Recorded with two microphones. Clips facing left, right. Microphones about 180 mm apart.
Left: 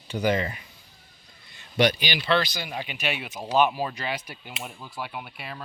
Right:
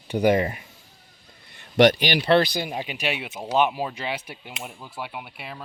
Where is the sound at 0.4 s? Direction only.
45° right (ahead or behind).